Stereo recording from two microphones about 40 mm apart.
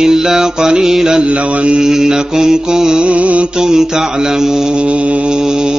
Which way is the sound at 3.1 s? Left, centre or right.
Right.